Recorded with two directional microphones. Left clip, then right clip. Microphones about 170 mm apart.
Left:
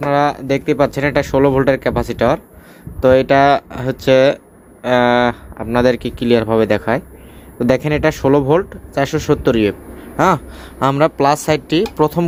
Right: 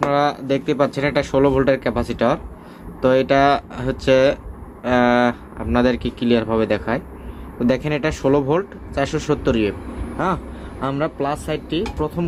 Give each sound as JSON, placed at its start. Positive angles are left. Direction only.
{"t": 0.1, "sound": "speech", "side_deg": 40}
{"t": 10.2, "sound": "speech", "side_deg": 60}